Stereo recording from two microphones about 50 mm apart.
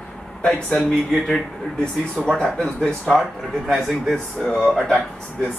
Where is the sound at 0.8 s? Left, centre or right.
Centre.